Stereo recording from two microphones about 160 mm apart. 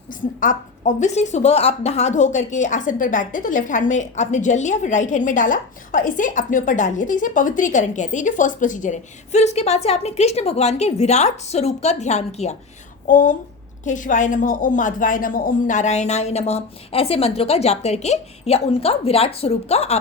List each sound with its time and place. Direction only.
0.1 s speech: 55° left (ahead or behind)
13.1 s a woman's voice: 55° left (ahead or behind); by 20.0 s 40° left (ahead or behind)